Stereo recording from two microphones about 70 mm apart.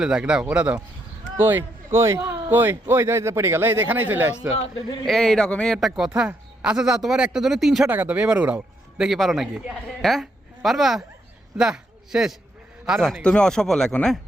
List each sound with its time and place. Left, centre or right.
0.0 s speech: centre
1.4 s a man's voice: right
5.0 s speech: centre
5.7 s speech: centre
6.1 s speech: centre
7.9 s speech: right
9.0 s speech: centre
13.0 s speech: centre